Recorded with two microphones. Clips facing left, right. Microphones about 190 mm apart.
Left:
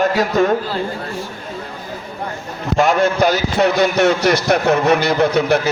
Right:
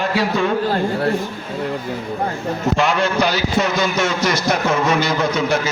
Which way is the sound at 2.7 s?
45° left (ahead or behind).